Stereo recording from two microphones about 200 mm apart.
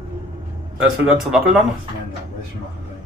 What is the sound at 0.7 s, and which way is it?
Speech, 5° right (ahead or behind).